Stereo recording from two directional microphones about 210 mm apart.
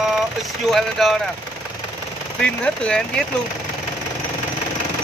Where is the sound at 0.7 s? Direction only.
Centre (ahead or behind).